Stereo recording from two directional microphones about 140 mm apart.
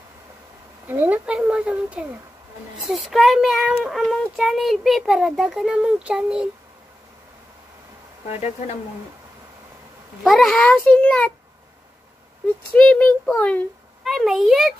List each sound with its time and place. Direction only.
0.8 s a child's voice: 15° right (ahead or behind)
8.3 s speech: 50° left (ahead or behind)
10.2 s a child's voice: 5° left (ahead or behind)
12.7 s a child's voice: 10° left (ahead or behind)
14.0 s a child's voice: centre (ahead or behind)